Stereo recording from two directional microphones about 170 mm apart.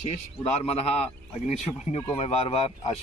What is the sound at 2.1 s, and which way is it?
Speech, 35° left (ahead or behind).